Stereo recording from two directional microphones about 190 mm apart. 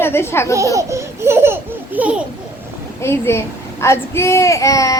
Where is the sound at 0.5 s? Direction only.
15° right (ahead or behind).